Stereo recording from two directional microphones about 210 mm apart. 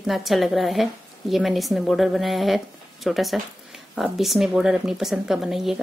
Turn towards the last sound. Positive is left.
turn(degrees=0)  # may be behind; listen again after turning